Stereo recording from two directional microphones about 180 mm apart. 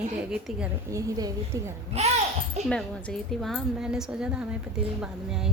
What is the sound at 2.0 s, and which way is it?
Speech, 35° right (ahead or behind).